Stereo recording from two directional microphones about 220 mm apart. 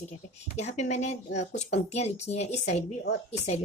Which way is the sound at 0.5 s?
30° left (ahead or behind).